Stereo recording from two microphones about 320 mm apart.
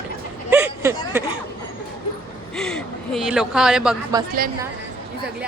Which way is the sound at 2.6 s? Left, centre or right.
Centre.